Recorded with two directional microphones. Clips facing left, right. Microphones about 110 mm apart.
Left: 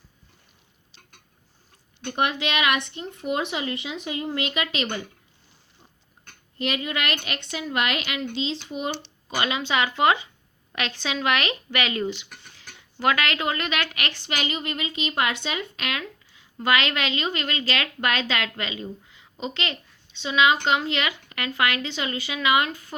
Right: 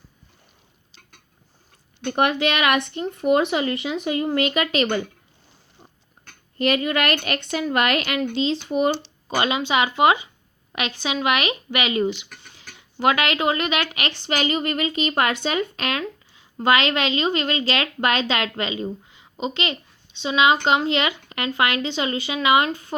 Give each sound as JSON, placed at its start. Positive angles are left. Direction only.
{"t": 2.0, "sound": "speech", "side_deg": -55}
{"t": 6.6, "sound": "speech", "side_deg": -50}
{"t": 9.3, "sound": "speech", "side_deg": -25}
{"t": 14.3, "sound": "a woman's voice", "side_deg": -40}